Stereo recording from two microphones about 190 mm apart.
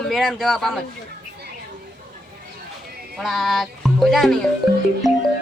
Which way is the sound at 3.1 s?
Centre (ahead or behind).